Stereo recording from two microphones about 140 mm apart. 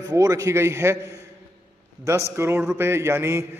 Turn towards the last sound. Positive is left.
turn(degrees=-20)  # may be behind; listen again after turning